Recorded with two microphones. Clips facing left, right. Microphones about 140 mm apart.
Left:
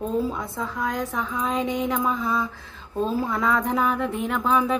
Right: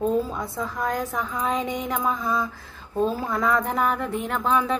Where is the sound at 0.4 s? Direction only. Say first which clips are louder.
Even; centre (ahead or behind).